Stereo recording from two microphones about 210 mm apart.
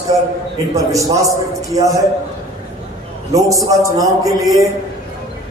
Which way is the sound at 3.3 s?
15° right (ahead or behind).